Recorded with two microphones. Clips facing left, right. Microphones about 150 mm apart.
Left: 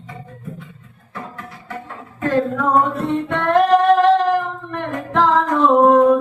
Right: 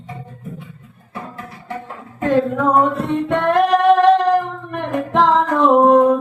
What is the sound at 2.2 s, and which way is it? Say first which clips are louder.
Singing: right 2 dB; 15° right (ahead or behind).